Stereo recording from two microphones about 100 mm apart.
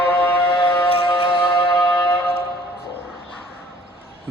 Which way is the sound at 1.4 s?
20° left (ahead or behind).